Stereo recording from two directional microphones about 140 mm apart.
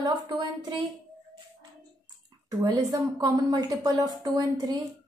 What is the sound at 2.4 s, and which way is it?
A woman's voice, 25° right (ahead or behind).